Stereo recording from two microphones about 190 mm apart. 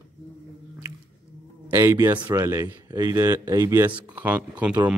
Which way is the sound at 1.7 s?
15° right (ahead or behind).